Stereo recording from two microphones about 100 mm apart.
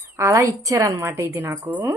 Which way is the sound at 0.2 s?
30° right (ahead or behind).